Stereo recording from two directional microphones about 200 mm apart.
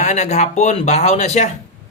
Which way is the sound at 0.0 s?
35° left (ahead or behind).